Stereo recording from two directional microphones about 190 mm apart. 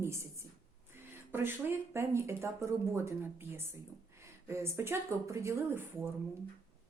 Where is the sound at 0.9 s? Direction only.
10° right (ahead or behind).